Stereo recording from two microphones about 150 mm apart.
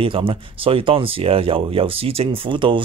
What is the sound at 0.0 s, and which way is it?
Speech, 35° right (ahead or behind).